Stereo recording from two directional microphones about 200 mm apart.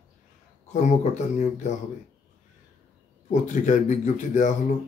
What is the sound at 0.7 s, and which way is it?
Speech, 35° left (ahead or behind).